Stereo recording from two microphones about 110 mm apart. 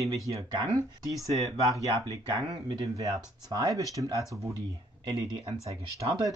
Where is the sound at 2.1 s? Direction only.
35° right (ahead or behind).